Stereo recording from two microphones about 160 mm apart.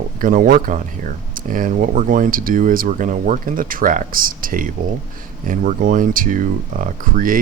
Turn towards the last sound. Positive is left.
turn(degrees=-55)  # may be behind; listen again after turning